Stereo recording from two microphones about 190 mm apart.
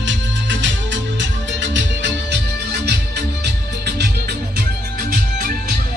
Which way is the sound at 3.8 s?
60° right (ahead or behind).